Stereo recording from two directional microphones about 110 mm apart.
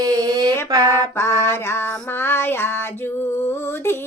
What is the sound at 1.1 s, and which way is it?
Music, 25° left (ahead or behind).